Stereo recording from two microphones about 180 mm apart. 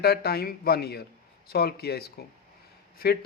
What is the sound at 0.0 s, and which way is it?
A man's voice, 60° left (ahead or behind).